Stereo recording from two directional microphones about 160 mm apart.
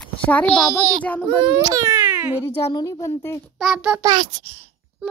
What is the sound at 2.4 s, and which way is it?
A woman's voice, 20° left (ahead or behind).